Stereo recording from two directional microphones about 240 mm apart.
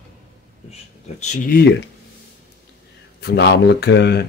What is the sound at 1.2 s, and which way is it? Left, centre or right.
Speech, left.